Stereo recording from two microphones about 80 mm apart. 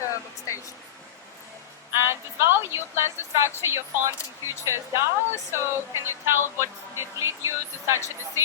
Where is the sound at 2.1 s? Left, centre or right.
Right.